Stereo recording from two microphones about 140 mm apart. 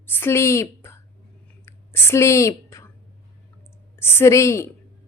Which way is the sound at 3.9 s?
15° left (ahead or behind).